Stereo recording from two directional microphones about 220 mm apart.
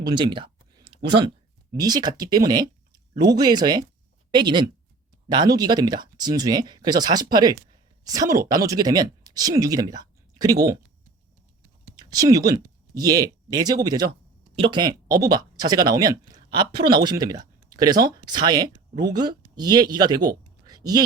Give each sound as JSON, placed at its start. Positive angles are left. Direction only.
{"t": 0.0, "sound": "a sound", "side_deg": -20}
{"t": 1.7, "sound": "speech", "side_deg": -20}
{"t": 11.9, "sound": "speech", "side_deg": -15}